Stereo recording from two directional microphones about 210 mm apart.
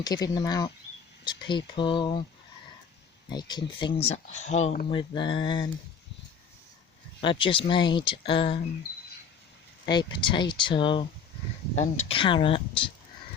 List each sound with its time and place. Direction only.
0.0 s speech: 20° left (ahead or behind)
3.2 s speech: 20° left (ahead or behind); by 4.9 s 35° left (ahead or behind)
4.9 s speech: 25° left (ahead or behind)
7.2 s speech: 25° left (ahead or behind)
9.8 s speech: 20° left (ahead or behind)